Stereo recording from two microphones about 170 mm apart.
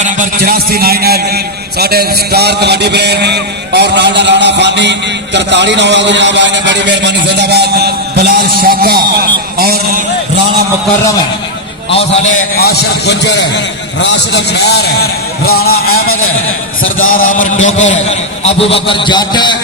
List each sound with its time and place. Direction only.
0.0 s a man's voice: 55° right (ahead or behind)
9.6 s a sound: 65° right (ahead or behind)
12.5 s a man's voice: 70° left (ahead or behind)
17.6 s a man's voice: 40° left (ahead or behind); by 19.5 s 25° left (ahead or behind)